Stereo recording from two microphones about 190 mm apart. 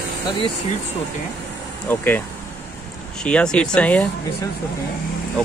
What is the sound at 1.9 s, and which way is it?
Speech, 10° left (ahead or behind).